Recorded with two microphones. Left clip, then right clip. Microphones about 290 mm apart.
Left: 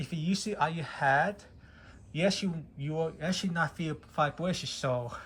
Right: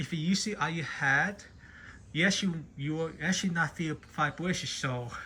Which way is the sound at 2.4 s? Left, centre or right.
Left.